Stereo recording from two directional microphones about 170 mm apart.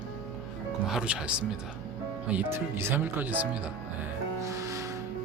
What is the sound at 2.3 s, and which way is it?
Speech, 10° right (ahead or behind).